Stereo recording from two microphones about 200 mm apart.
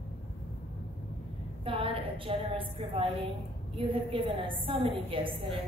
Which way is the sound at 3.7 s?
25° right (ahead or behind).